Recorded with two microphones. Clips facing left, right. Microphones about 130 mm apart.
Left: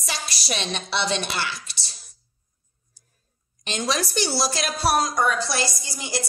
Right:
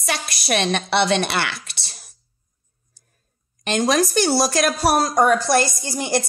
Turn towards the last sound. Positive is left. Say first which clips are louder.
# right 8 dB
turn(degrees=-55)  # may be behind; listen again after turning